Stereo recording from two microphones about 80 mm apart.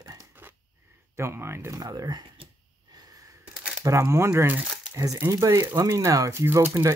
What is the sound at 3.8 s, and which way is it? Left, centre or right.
Speech, right.